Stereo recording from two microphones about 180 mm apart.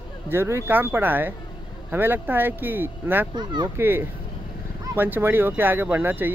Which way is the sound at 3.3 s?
25° right (ahead or behind).